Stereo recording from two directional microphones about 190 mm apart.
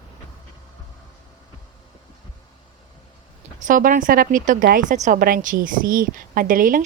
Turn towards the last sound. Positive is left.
turn(degrees=-45)  # may be behind; listen again after turning